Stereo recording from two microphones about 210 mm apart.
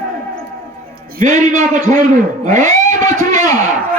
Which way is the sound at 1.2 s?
35° right (ahead or behind).